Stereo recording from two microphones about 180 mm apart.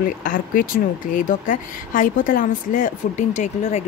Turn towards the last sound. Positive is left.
turn(degrees=40)  # may be behind; listen again after turning